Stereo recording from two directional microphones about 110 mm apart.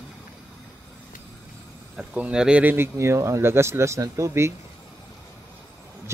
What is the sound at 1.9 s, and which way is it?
Speech, 10° right (ahead or behind).